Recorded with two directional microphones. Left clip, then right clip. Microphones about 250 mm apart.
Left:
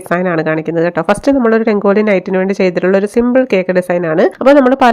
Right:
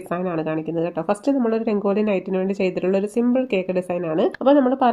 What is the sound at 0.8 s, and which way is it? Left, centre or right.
Speech, left.